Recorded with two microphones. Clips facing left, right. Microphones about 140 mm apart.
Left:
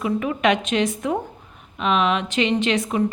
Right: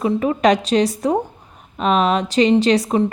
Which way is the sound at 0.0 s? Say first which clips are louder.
Right 4 dB; 35° right (ahead or behind).